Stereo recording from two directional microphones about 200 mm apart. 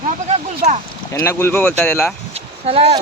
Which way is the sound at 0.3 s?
35° right (ahead or behind).